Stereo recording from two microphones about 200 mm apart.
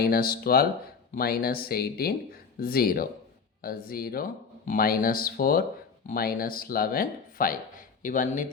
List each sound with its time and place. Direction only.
0.0 s speech: 50° left (ahead or behind)